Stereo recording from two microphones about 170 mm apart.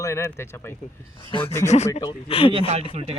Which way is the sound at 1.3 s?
30° left (ahead or behind).